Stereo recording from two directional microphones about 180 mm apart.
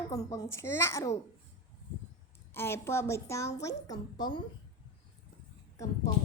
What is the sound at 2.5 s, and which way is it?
A woman's voice, 15° left (ahead or behind).